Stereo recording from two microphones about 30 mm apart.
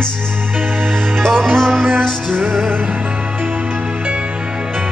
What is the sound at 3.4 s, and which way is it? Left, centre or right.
Music, right.